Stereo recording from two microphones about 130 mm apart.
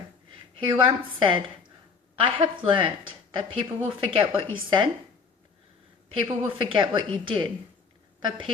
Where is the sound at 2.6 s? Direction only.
40° right (ahead or behind).